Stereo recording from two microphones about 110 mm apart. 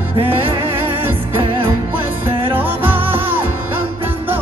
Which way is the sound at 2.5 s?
20° right (ahead or behind).